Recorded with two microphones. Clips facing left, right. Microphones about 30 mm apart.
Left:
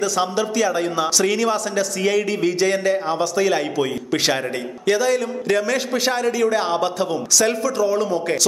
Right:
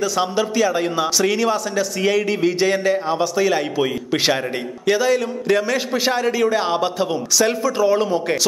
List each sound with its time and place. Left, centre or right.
0.0 s a man's voice: centre
7.8 s speech: right